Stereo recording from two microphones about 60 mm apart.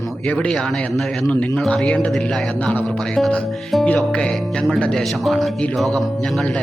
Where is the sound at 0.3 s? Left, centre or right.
Centre.